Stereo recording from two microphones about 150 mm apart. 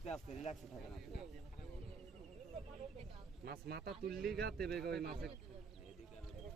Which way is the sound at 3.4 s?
90° right.